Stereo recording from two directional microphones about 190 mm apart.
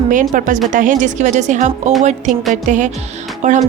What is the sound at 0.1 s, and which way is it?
A woman's voice, 45° right (ahead or behind).